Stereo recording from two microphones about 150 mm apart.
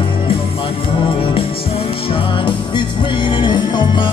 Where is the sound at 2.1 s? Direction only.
35° left (ahead or behind).